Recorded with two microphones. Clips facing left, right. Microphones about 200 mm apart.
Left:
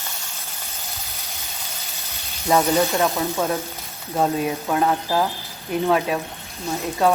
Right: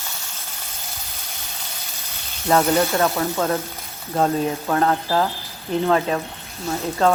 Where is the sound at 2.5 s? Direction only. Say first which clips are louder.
Right 1 dB; 10° left (ahead or behind).